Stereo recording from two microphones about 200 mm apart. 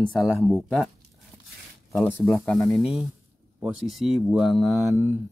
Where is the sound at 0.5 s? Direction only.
Centre (ahead or behind).